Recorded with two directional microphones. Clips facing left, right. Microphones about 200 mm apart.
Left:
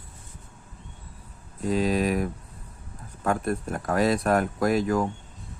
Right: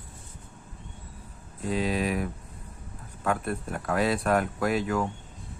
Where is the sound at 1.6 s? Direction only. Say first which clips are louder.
Left 4 dB; 45° left (ahead or behind).